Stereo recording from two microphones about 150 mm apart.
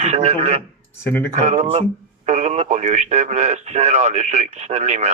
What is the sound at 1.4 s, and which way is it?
Speech, 45° right (ahead or behind).